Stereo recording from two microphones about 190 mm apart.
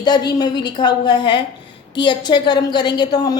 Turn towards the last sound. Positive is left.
turn(degrees=20)  # may be behind; listen again after turning